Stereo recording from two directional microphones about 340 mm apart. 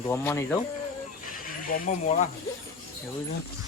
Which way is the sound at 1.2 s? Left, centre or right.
Left.